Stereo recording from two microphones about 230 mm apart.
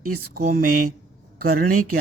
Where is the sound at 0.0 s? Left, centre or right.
Right.